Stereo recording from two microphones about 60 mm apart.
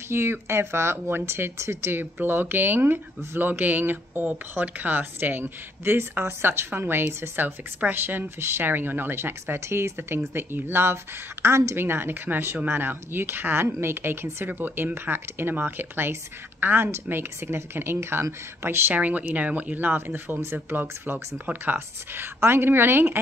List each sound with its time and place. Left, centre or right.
0.1 s speech: right
18.9 s speech: right